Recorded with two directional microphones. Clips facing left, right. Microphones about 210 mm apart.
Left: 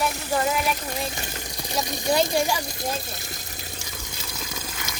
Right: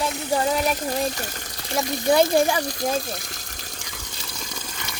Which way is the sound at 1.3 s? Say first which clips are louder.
Right 2 dB; 10° left (ahead or behind).